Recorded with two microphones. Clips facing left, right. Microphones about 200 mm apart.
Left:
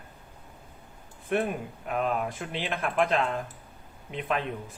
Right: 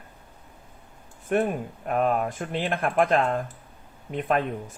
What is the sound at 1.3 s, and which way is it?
Speech, 45° right (ahead or behind).